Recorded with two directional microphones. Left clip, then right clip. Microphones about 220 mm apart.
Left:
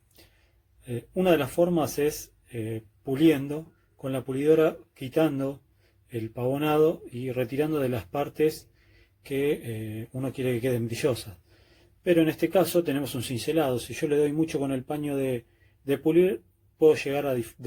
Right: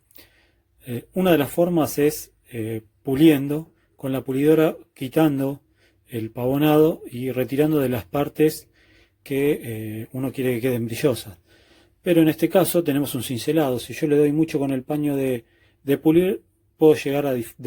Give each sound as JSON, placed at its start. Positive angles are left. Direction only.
{"t": 0.9, "sound": "speech", "side_deg": -35}